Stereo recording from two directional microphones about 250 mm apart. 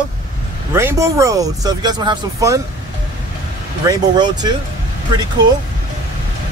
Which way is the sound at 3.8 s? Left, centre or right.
Centre.